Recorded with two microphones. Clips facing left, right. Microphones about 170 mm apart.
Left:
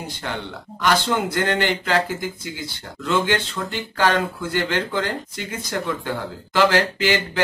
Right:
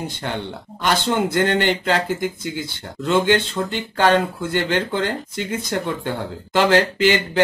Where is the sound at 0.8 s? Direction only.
25° right (ahead or behind).